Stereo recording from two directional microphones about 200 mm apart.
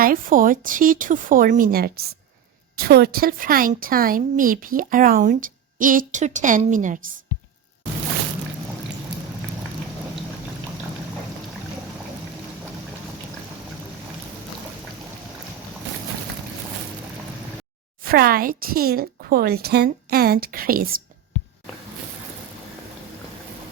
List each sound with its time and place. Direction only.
0.0 s a woman's voice: 45° right (ahead or behind)
18.0 s a woman's voice: 45° right (ahead or behind)